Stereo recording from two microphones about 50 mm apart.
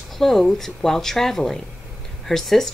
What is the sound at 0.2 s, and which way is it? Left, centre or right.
A woman's voice, centre.